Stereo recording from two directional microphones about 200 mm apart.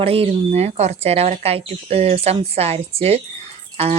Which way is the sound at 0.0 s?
30° right (ahead or behind).